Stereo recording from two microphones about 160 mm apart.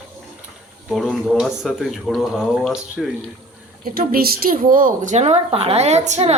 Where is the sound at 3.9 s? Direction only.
65° right (ahead or behind).